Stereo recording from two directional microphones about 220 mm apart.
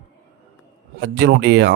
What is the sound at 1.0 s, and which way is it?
Speech, 50° right (ahead or behind).